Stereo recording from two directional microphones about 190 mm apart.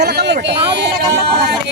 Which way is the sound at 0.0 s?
60° right (ahead or behind).